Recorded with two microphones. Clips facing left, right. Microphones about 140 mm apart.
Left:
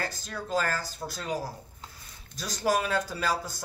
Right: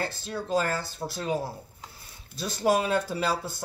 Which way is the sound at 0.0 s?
25° right (ahead or behind).